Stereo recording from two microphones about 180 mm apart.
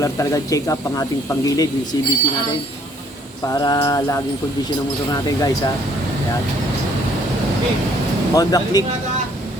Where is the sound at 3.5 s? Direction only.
25° left (ahead or behind).